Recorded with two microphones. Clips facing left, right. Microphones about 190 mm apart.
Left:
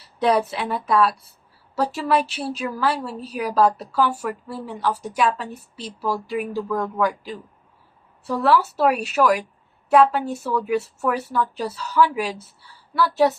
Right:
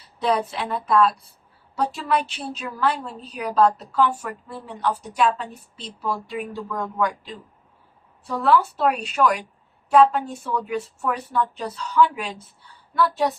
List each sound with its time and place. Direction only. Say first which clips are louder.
0.2 s a woman's voice: left 3 dB; centre (ahead or behind)
8.4 s a woman's voice: left 1 dB; 5° left (ahead or behind)